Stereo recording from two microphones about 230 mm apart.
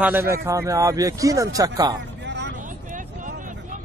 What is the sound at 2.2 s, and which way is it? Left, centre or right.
Vehicle, right.